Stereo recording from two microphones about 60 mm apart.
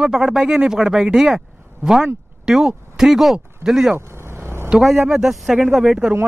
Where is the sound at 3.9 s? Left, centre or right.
Right.